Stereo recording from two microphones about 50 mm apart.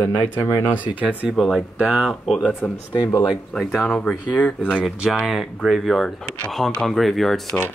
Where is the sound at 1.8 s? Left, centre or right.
Centre.